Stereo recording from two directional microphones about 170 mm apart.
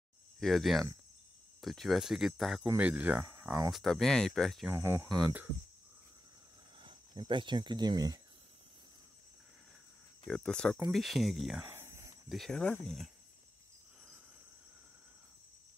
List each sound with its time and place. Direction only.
0.4 s speech: centre (ahead or behind); by 3.7 s 20° right (ahead or behind)
3.7 s speech: centre (ahead or behind)
4.6 s speech: 15° right (ahead or behind)
6.8 s speech: 30° right (ahead or behind)
10.2 s speech: 5° left (ahead or behind)
11.6 s a sound: 15° right (ahead or behind)
12.3 s speech: centre (ahead or behind)